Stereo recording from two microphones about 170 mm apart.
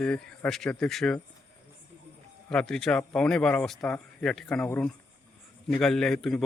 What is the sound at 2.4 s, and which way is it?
Speech, 5° left (ahead or behind).